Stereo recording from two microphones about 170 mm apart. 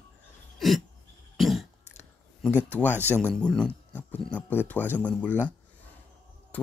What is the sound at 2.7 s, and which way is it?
Speech, 10° left (ahead or behind).